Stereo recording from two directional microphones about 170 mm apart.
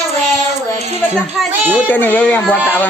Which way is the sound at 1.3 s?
5° right (ahead or behind).